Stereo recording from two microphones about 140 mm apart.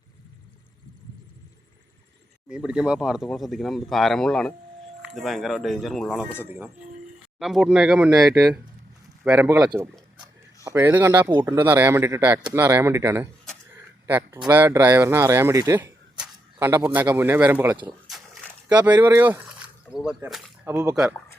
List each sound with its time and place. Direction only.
2.5 s speech: 5° right (ahead or behind)
6.4 s speech: 10° right (ahead or behind)
16.1 s a sound: 5° right (ahead or behind)
16.6 s speech: 15° right (ahead or behind)